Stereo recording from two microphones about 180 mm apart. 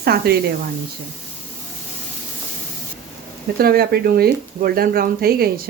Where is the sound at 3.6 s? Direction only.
60° right (ahead or behind).